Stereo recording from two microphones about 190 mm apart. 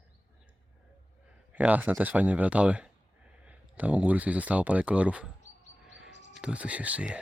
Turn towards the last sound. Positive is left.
turn(degrees=-5)  # may be behind; listen again after turning